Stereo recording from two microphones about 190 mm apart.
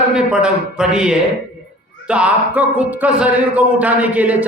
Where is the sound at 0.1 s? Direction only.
5° right (ahead or behind).